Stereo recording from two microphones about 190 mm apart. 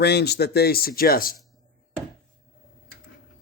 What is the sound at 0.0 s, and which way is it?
Speech, 60° left (ahead or behind).